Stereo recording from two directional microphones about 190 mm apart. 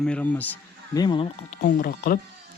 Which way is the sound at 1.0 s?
25° left (ahead or behind).